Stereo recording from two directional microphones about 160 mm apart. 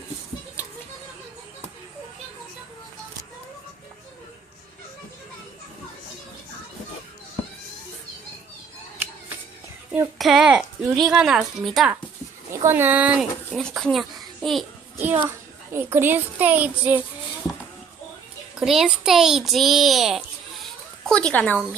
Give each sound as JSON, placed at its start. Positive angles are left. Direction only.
{"t": 10.2, "sound": "a woman's voice", "side_deg": -5}
{"t": 12.5, "sound": "speech", "side_deg": -15}
{"t": 13.6, "sound": "a woman's voice", "side_deg": 5}
{"t": 14.9, "sound": "a child's voice", "side_deg": -10}
{"t": 18.6, "sound": "a woman's voice", "side_deg": 0}